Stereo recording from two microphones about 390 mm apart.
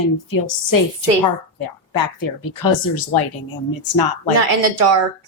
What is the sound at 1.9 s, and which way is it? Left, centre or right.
A woman's voice, left.